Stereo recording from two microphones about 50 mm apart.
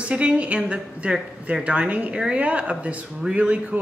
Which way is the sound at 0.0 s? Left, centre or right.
Right.